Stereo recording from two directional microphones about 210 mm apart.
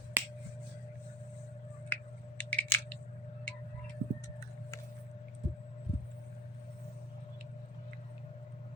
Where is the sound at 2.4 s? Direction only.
5° left (ahead or behind).